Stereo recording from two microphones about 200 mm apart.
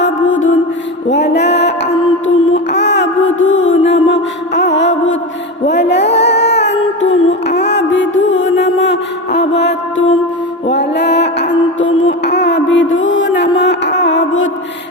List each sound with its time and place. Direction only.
0.0 s music: 75° left (ahead or behind)
1.1 s child singing: 60° left (ahead or behind)
5.6 s music: 60° left (ahead or behind)